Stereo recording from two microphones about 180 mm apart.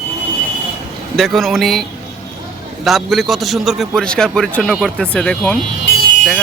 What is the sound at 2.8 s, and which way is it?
A man's voice, centre (ahead or behind).